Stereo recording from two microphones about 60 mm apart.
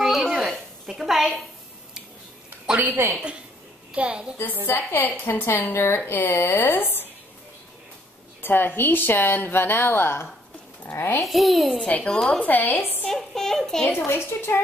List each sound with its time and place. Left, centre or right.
0.0 s a sound: centre
2.7 s a woman's voice: right
3.9 s a woman's voice: centre
4.6 s a woman's voice: left
8.4 s a woman's voice: left
11.2 s a child's voice: centre
11.8 s speech: left
13.0 s a child's voice: centre
13.9 s speech: left